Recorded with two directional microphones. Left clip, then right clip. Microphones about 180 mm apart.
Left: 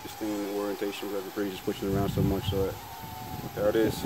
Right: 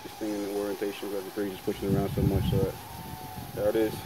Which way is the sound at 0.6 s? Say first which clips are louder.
Even; 55° left (ahead or behind).